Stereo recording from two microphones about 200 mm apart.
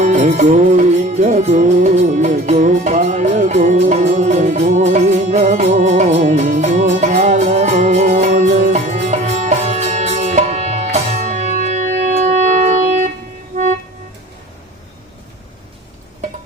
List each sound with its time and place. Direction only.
0.0 s music: 35° right (ahead or behind)